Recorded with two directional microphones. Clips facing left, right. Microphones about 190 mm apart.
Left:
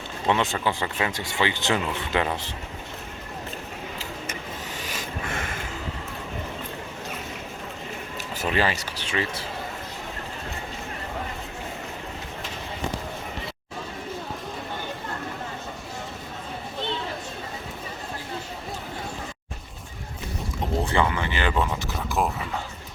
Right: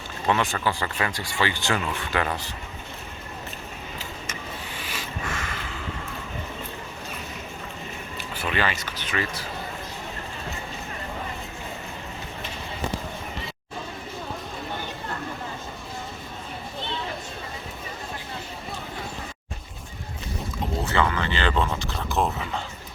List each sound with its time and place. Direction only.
0.3 s speech: 20° left (ahead or behind)
4.8 s a sound: 45° left (ahead or behind)
8.4 s speech: 35° left (ahead or behind)
20.8 s speech: 15° left (ahead or behind)